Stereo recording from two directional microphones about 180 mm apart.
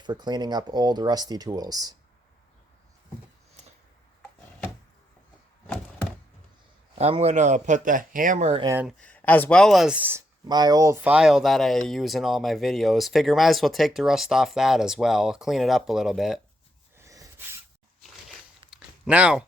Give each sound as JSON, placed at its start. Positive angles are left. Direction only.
{"t": 0.0, "sound": "speech", "side_deg": -25}
{"t": 5.6, "sound": "thunk", "side_deg": 5}
{"t": 7.0, "sound": "speech", "side_deg": -35}
{"t": 8.6, "sound": "speech", "side_deg": -15}
{"t": 8.9, "sound": "speech", "side_deg": 5}
{"t": 17.0, "sound": "sneeze", "side_deg": -15}
{"t": 18.7, "sound": "a sound", "side_deg": -5}